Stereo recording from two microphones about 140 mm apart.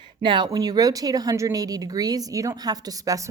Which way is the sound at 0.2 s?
35° right (ahead or behind).